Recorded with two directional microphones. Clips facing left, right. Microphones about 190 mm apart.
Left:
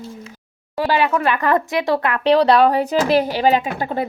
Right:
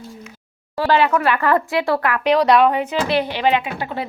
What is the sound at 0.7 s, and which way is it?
A woman's voice, 15° left (ahead or behind).